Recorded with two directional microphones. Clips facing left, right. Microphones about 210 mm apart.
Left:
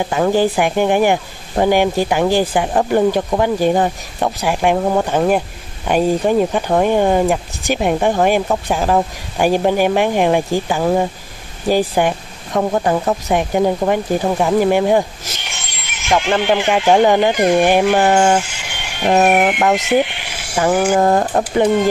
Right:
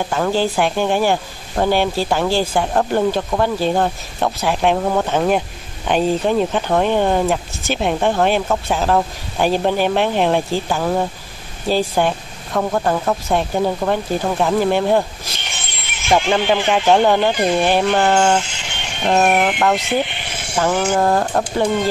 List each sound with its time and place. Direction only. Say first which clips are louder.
0.0 s speech: left 3 dB; 15° left (ahead or behind)
15.8 s music: even; 15° left (ahead or behind)
16.3 s speech: left 1 dB; 15° left (ahead or behind)